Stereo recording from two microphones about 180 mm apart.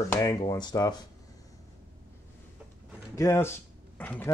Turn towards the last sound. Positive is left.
turn(degrees=10)  # may be behind; listen again after turning